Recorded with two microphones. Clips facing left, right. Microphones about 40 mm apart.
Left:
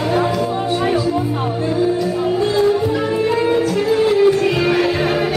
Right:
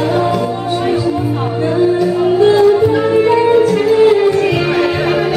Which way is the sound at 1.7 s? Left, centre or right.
Right.